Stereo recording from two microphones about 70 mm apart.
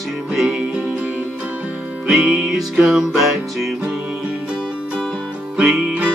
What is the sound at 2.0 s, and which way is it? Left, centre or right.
Music, centre.